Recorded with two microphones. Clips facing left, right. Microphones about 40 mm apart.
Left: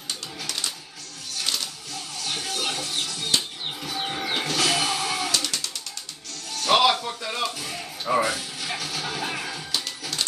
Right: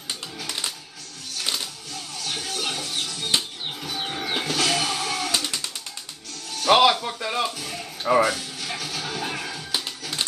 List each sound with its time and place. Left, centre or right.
0.5 s music: centre
2.0 s music: centre
5.3 s music: right
6.5 s music: centre
7.5 s music: centre
9.8 s music: centre